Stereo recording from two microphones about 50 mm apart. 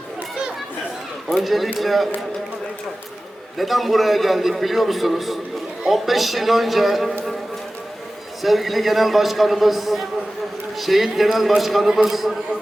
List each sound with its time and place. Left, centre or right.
1.3 s a man's voice: centre
3.6 s a man's voice: centre
8.4 s a man's voice: centre